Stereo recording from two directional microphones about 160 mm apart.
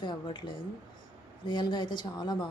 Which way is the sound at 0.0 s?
30° left (ahead or behind).